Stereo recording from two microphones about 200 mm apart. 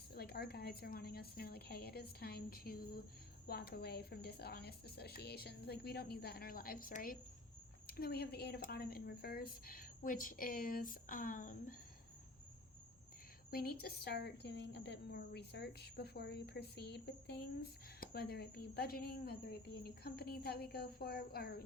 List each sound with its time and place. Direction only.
0.1 s a woman's voice: 50° left (ahead or behind)
13.5 s a woman's voice: 50° left (ahead or behind)